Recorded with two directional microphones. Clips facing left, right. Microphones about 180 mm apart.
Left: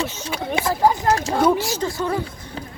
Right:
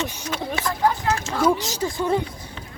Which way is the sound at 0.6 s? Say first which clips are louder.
Left 6 dB; 20° left (ahead or behind).